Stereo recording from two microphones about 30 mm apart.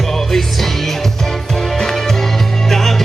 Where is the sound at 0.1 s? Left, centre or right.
Centre.